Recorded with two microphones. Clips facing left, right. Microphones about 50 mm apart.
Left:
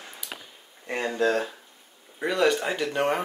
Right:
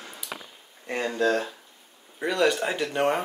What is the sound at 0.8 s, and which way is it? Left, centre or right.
Speech, centre.